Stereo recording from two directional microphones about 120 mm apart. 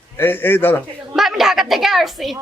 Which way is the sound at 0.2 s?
15° left (ahead or behind).